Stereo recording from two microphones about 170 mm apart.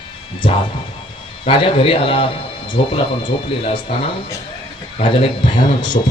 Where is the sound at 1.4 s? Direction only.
30° left (ahead or behind).